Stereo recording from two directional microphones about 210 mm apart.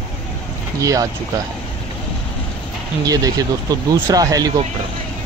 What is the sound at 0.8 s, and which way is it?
Speech, 15° right (ahead or behind).